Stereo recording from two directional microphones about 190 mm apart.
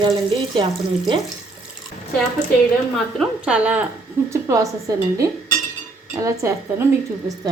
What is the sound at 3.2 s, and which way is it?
A woman's voice, 5° right (ahead or behind).